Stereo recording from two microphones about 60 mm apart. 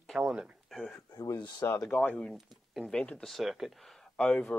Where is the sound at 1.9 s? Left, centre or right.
Left.